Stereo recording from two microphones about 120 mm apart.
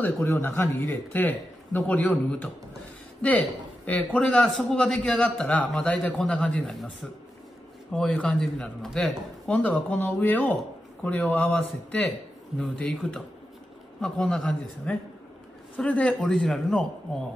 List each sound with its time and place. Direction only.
0.0 s a man's voice: 20° left (ahead or behind)